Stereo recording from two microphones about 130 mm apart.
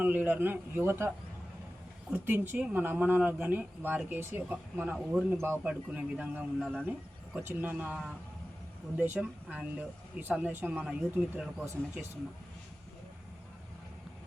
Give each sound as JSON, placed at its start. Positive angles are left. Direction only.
{"t": 0.0, "sound": "speech", "side_deg": -15}
{"t": 6.6, "sound": "speech", "side_deg": 5}
{"t": 7.3, "sound": "speech", "side_deg": -15}
{"t": 9.1, "sound": "speech", "side_deg": -10}